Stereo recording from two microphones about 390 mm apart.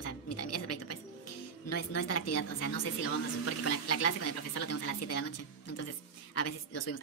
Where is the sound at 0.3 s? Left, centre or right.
Left.